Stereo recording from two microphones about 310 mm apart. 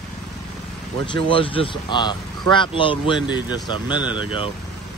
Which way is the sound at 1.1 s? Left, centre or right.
Centre.